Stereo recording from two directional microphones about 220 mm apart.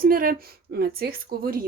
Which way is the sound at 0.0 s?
40° right (ahead or behind).